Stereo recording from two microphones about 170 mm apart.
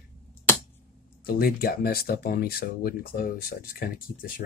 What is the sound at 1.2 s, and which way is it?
Speech, 60° left (ahead or behind).